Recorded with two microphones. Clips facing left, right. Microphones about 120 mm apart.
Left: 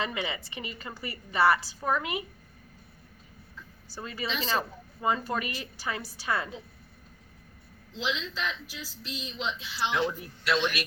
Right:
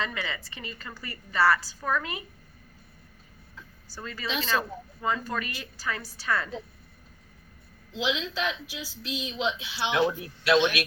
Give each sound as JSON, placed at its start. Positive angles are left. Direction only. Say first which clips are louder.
{"t": 0.0, "sound": "a woman's voice", "louder": "left 1 dB", "side_deg": 20}
{"t": 4.0, "sound": "a woman's voice", "louder": "right 1 dB", "side_deg": 20}
{"t": 7.9, "sound": "speech", "louder": "right 4 dB", "side_deg": -70}